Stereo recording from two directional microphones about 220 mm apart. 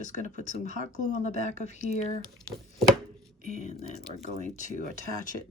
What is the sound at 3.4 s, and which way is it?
Speech, 30° left (ahead or behind).